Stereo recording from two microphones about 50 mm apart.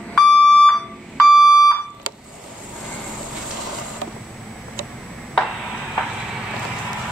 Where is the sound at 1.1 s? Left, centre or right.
Centre.